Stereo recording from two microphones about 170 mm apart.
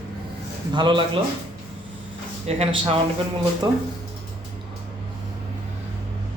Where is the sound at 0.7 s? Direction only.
25° right (ahead or behind).